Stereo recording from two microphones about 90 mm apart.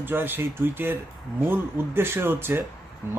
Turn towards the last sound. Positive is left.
turn(degrees=-25)  # may be behind; listen again after turning